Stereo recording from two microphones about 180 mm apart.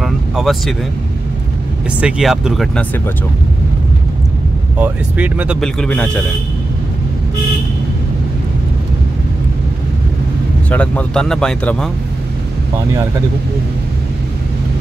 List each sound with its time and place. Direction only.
0.0 s vehicle: centre (ahead or behind)
2.0 s speech: 5° right (ahead or behind)
4.7 s speech: 10° right (ahead or behind)
5.6 s speech: 5° left (ahead or behind)
10.7 s speech: 5° left (ahead or behind)